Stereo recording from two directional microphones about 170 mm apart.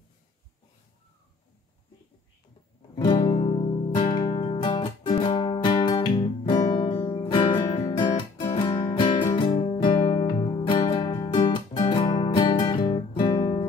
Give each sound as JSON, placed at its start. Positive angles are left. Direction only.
{"t": 3.0, "sound": "music", "side_deg": 25}